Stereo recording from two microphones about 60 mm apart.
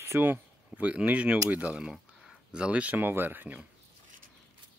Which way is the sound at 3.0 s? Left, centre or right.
Right.